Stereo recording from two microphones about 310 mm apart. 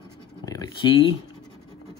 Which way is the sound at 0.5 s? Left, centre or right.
Centre.